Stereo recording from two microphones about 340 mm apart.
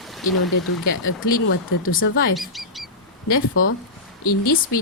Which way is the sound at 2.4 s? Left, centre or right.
Centre.